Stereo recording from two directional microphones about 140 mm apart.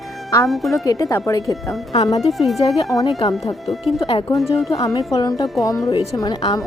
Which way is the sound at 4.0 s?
40° left (ahead or behind).